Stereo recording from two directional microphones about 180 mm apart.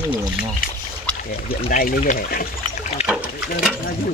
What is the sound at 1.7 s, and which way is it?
Speech, 45° left (ahead or behind).